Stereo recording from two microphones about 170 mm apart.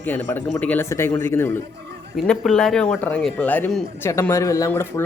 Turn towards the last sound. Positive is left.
turn(degrees=15)  # may be behind; listen again after turning